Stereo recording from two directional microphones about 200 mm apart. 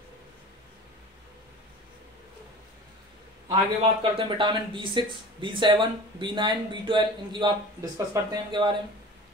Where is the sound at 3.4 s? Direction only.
25° right (ahead or behind).